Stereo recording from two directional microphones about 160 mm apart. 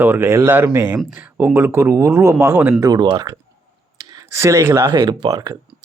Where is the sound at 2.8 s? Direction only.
25° right (ahead or behind).